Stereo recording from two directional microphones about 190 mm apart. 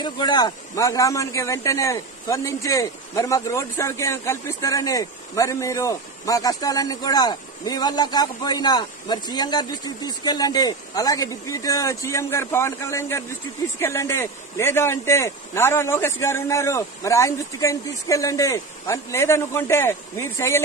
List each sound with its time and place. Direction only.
0.0 s speech: 20° left (ahead or behind)